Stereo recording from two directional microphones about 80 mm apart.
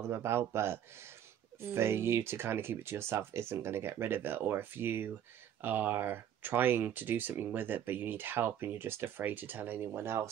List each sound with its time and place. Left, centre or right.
0.0 s speech: right